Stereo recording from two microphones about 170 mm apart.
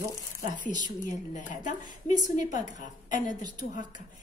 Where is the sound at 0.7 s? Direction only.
50° left (ahead or behind).